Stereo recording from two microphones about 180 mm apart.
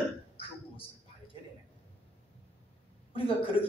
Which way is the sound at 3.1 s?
30° left (ahead or behind).